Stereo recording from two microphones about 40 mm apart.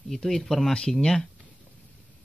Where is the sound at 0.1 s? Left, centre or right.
Centre.